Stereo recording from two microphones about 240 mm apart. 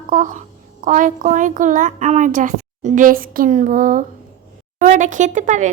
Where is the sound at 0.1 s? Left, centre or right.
Right.